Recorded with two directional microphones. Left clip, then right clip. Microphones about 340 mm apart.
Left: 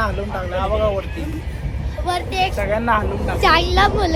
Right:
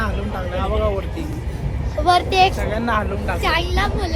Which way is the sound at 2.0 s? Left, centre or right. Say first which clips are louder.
Right 6 dB; right.